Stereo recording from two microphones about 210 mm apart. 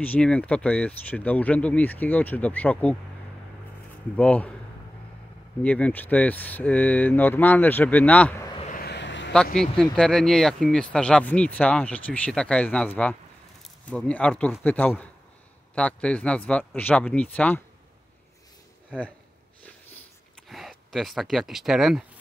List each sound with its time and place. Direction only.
0.0 s speech: 5° left (ahead or behind)
4.2 s speech: 5° left (ahead or behind)
5.6 s speech: 5° left (ahead or behind)
8.5 s vehicle: 35° left (ahead or behind)
8.8 s a sound: 55° left (ahead or behind)
9.6 s speech: centre (ahead or behind)
18.9 s speech: 5° left (ahead or behind)
20.4 s speech: centre (ahead or behind)